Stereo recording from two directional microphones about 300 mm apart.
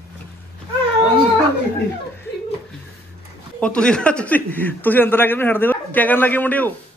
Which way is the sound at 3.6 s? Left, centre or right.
Centre.